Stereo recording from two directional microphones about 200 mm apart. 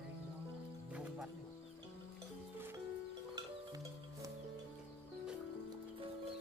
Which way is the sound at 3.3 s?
15° right (ahead or behind).